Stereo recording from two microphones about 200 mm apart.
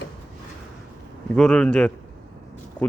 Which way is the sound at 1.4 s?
5° left (ahead or behind).